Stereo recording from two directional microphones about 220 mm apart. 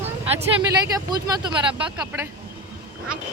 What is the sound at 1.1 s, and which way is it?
Speech, 20° right (ahead or behind).